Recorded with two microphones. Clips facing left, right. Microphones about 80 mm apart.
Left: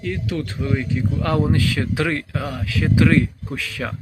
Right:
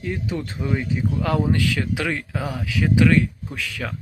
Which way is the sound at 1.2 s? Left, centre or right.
Centre.